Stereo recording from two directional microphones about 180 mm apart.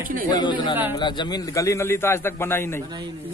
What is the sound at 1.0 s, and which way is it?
A man's voice, 25° left (ahead or behind).